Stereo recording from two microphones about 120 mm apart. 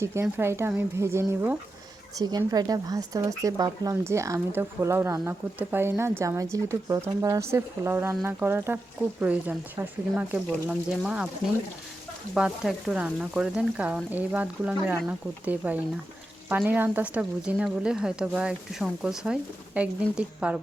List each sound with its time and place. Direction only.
0.0 s speech: 20° right (ahead or behind)
2.1 s a woman's voice: 35° right (ahead or behind); by 11.3 s 10° right (ahead or behind)
12.3 s a woman's voice: centre (ahead or behind)